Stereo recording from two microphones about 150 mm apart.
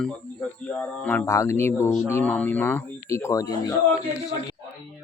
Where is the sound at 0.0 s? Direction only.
5° left (ahead or behind); by 3.8 s 25° left (ahead or behind).